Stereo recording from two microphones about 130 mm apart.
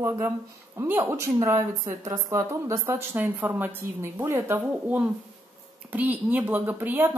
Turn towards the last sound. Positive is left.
turn(degrees=-15)  # may be behind; listen again after turning